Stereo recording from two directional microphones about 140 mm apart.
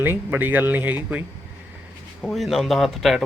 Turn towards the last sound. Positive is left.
turn(degrees=0)  # may be behind; listen again after turning